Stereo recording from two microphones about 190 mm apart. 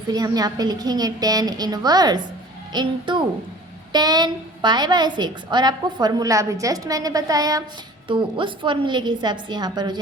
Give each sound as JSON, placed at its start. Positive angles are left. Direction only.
{"t": 0.1, "sound": "a woman's voice", "side_deg": -20}